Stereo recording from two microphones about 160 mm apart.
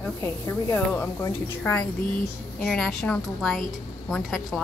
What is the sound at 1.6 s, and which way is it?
Speech, 5° left (ahead or behind).